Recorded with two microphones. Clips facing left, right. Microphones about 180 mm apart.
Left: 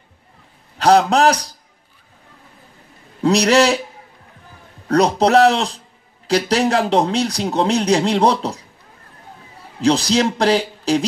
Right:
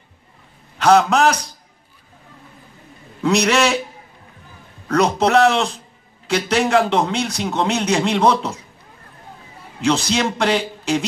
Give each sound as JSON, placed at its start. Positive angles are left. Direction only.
{"t": 0.7, "sound": "a man's voice", "side_deg": 35}
{"t": 3.2, "sound": "a man's voice", "side_deg": 35}
{"t": 4.8, "sound": "a man's voice", "side_deg": 35}
{"t": 9.8, "sound": "a man's voice", "side_deg": 35}